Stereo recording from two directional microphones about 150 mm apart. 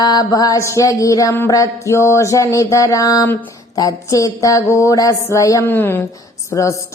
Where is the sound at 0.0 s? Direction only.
25° left (ahead or behind).